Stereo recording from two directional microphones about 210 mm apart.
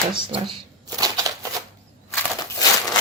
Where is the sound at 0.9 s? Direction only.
15° right (ahead or behind).